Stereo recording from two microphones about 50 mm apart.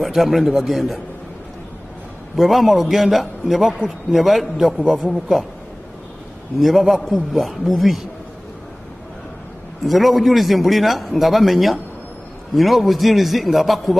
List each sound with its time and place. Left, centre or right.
0.0 s a man's voice: centre
2.3 s a man's voice: centre
6.6 s a man's voice: centre
9.8 s a man's voice: centre